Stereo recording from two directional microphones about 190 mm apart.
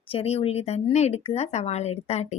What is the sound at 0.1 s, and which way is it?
A woman's voice, 30° left (ahead or behind).